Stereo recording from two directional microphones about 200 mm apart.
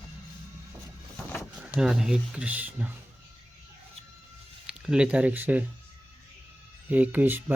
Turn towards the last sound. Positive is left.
turn(degrees=-10)  # may be behind; listen again after turning